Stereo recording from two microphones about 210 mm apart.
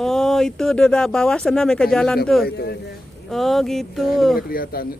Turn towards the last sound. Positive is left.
turn(degrees=45)  # may be behind; listen again after turning